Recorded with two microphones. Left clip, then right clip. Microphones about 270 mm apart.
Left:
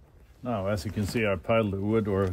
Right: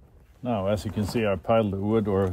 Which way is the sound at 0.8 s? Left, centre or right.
Centre.